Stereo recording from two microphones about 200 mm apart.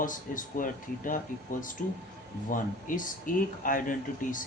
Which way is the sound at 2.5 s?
40° left (ahead or behind).